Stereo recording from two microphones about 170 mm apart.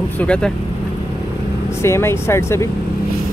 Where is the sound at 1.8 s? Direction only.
15° left (ahead or behind).